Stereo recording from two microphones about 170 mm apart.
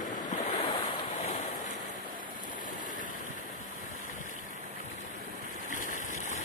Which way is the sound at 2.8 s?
50° left (ahead or behind).